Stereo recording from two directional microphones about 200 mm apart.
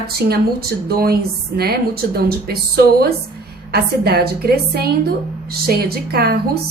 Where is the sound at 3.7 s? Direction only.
50° right (ahead or behind).